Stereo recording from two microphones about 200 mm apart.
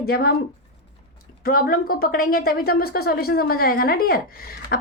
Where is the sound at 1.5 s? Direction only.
45° left (ahead or behind).